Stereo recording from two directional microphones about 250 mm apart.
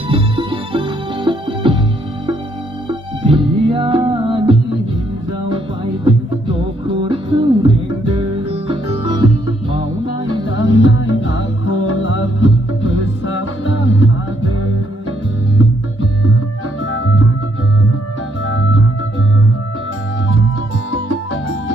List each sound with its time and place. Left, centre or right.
0.1 s music: centre
3.2 s music: centre
10.8 s music: left
16.9 s music: left